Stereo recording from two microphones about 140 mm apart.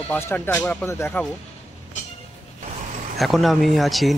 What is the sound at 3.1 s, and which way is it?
Speech, centre (ahead or behind).